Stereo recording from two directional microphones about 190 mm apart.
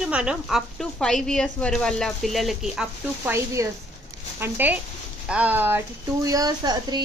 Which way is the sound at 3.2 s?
15° right (ahead or behind).